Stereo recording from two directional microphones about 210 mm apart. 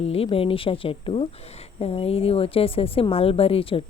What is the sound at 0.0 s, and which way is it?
A woman's voice, 30° left (ahead or behind).